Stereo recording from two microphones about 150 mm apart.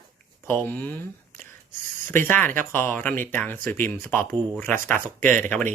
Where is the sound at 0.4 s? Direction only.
15° left (ahead or behind).